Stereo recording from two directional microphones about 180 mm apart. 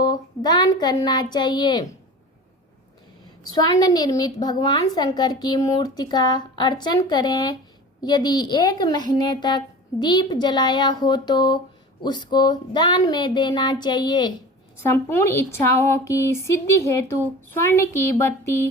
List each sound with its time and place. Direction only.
0.0 s a woman's voice: 25° left (ahead or behind)
3.5 s a woman's voice: 20° left (ahead or behind)
14.8 s a woman's voice: 15° left (ahead or behind)